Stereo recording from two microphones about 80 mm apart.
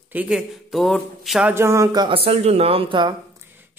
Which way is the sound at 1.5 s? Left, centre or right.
Right.